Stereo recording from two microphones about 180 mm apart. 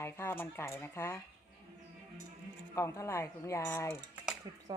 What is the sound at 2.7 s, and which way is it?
Speech, 15° left (ahead or behind).